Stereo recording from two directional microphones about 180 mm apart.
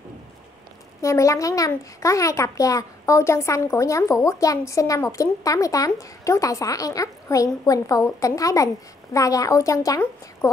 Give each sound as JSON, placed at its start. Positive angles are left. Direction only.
{"t": 1.0, "sound": "a child's voice", "side_deg": 15}